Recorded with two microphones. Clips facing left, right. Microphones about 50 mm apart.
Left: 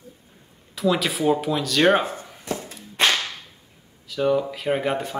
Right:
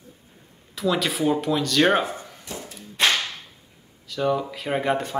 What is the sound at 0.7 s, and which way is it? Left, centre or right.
Speech, centre.